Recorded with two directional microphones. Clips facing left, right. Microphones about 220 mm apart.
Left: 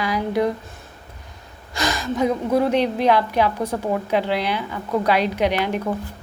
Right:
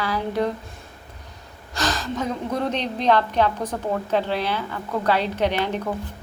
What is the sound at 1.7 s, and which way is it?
A woman's voice, 10° left (ahead or behind).